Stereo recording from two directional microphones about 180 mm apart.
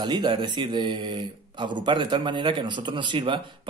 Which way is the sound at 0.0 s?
25° right (ahead or behind).